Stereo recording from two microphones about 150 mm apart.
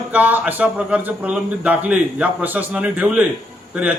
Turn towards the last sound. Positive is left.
turn(degrees=-10)  # may be behind; listen again after turning